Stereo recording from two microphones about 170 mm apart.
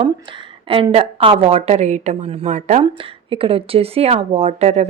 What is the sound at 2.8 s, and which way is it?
A woman's voice, 30° right (ahead or behind).